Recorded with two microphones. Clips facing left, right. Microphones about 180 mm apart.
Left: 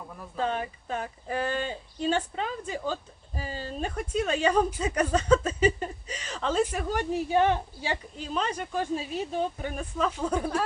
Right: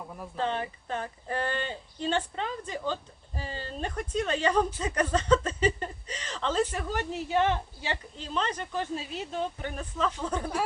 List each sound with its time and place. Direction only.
0.3 s speech: 10° left (ahead or behind)